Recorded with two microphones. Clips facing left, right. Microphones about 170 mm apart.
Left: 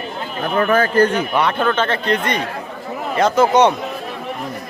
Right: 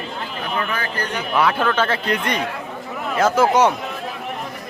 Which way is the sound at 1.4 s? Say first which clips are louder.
Right 1 dB; 5° right (ahead or behind).